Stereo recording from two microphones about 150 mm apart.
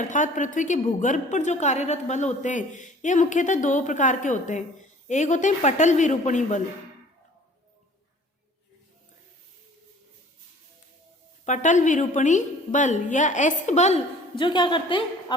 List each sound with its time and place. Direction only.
0.0 s a woman's voice: 55° left (ahead or behind)
11.4 s a woman's voice: 55° left (ahead or behind)
14.3 s a woman's voice: 30° left (ahead or behind)